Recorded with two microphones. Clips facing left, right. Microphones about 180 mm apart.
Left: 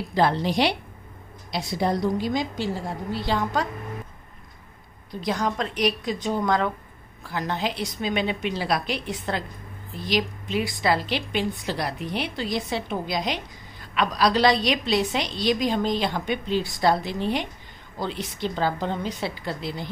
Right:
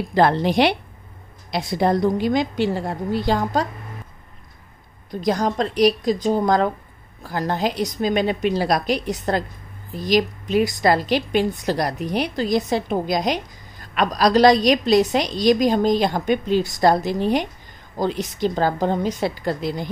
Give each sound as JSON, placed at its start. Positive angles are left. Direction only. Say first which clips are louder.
{"t": 0.1, "sound": "a woman's voice", "louder": "right 5 dB", "side_deg": -60}
{"t": 5.2, "sound": "a woman's voice", "louder": "right 5 dB", "side_deg": -40}